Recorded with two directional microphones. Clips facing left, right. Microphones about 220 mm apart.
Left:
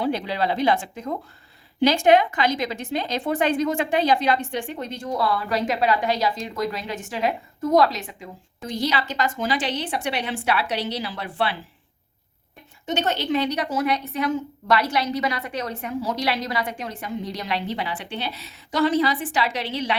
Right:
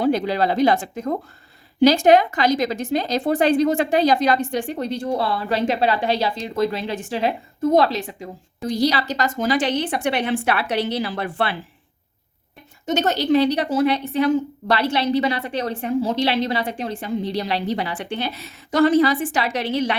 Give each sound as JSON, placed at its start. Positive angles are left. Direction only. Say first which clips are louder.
{"t": 0.0, "sound": "speech", "louder": "right 5 dB", "side_deg": -45}
{"t": 12.8, "sound": "speech", "louder": "right 4 dB", "side_deg": -40}